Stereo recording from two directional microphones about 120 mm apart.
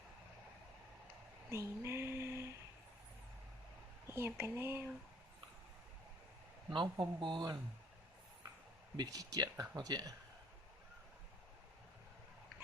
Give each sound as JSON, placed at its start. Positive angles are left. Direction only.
{"t": 1.5, "sound": "a sound", "side_deg": -25}
{"t": 4.0, "sound": "speech", "side_deg": -20}
{"t": 6.9, "sound": "speech", "side_deg": -40}
{"t": 9.0, "sound": "speech", "side_deg": -30}